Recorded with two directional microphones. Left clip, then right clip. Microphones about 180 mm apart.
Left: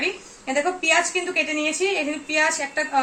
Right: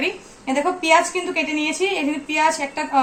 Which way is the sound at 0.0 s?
15° left (ahead or behind).